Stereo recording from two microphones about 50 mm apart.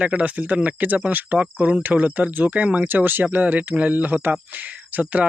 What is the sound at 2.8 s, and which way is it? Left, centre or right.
Speech, right.